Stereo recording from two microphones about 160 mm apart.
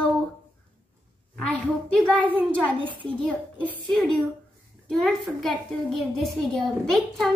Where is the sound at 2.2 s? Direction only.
10° right (ahead or behind).